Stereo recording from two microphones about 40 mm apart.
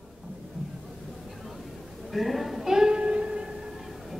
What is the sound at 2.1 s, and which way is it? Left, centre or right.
Speech, centre.